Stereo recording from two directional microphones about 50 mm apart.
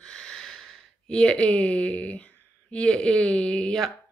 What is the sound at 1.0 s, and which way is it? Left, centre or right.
A woman's voice, left.